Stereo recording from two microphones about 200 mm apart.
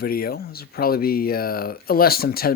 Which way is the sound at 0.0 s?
50° left (ahead or behind).